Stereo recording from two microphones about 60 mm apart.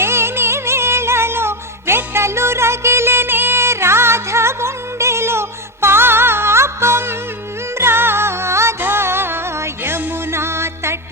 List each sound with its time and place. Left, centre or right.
0.0 s music: right